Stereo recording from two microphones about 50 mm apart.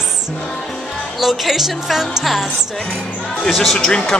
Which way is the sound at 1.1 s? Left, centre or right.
Centre.